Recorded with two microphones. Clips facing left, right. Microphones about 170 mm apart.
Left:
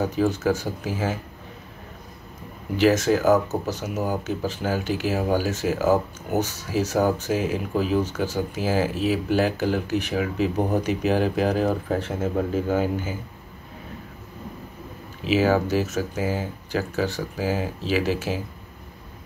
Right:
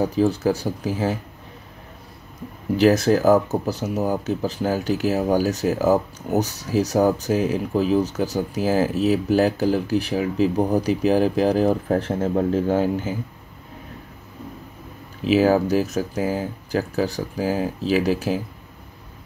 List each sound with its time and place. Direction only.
0.0 s speech: 35° right (ahead or behind)
2.8 s speech: 35° right (ahead or behind)
15.2 s speech: 40° right (ahead or behind)